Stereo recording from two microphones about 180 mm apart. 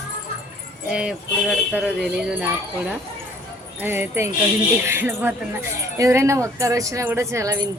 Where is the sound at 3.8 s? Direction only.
10° right (ahead or behind).